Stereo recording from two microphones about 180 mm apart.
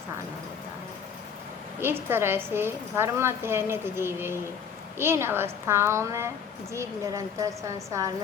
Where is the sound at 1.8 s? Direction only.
10° right (ahead or behind).